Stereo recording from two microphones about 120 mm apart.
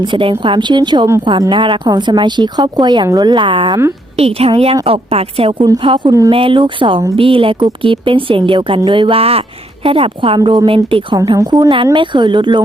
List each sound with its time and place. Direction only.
0.0 s speech: 45° right (ahead or behind)
4.2 s a woman's voice: 55° right (ahead or behind)
6.1 s speech: 30° right (ahead or behind)
6.3 s speech: 45° right (ahead or behind)